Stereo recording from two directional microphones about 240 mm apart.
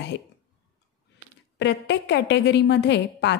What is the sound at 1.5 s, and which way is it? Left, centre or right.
A woman's voice, left.